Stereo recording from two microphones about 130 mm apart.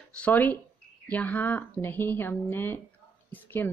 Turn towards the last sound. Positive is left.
turn(degrees=15)  # may be behind; listen again after turning